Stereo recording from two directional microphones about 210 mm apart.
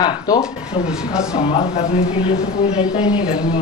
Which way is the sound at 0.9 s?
5° right (ahead or behind).